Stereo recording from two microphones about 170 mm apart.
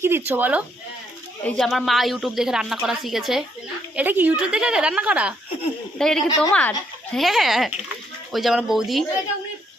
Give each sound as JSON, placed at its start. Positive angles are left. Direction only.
{"t": 0.0, "sound": "a woman's voice", "side_deg": -10}
{"t": 1.5, "sound": "a woman's voice", "side_deg": 0}